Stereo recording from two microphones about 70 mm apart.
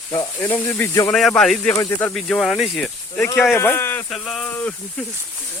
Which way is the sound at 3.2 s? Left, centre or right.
Left.